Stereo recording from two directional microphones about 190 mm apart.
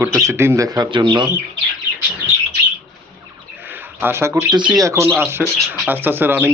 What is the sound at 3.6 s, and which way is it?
Speech, 10° right (ahead or behind).